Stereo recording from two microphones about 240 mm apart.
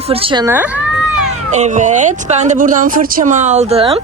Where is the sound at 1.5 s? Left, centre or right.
Right.